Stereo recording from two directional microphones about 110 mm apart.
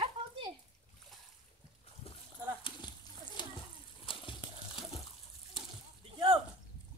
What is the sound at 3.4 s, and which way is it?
Splash, 45° left (ahead or behind).